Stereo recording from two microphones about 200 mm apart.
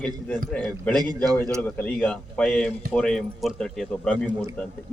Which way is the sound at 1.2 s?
20° right (ahead or behind).